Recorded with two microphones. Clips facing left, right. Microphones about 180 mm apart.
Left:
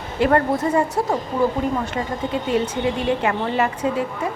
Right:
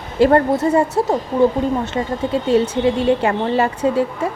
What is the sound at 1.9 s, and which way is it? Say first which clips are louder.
A woman's voice: right 4 dB; 30° right (ahead or behind).